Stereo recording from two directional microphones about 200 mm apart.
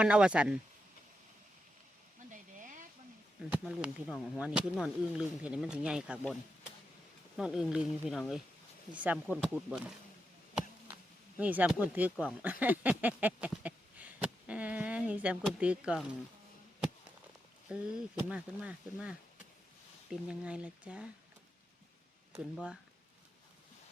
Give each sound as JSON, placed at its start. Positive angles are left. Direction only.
{"t": 0.0, "sound": "speech", "side_deg": -5}
{"t": 2.3, "sound": "a sound", "side_deg": -40}
{"t": 3.5, "sound": "speech", "side_deg": -5}
{"t": 7.3, "sound": "speech", "side_deg": -5}
{"t": 11.3, "sound": "speech", "side_deg": -5}
{"t": 17.7, "sound": "speech", "side_deg": -5}